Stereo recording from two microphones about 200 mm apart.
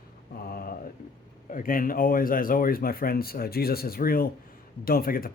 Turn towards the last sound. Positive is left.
turn(degrees=45)  # may be behind; listen again after turning